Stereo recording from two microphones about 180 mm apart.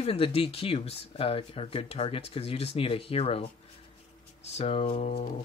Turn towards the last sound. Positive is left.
turn(degrees=35)  # may be behind; listen again after turning